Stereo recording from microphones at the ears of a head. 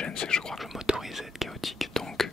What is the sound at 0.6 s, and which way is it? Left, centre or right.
Speech, centre.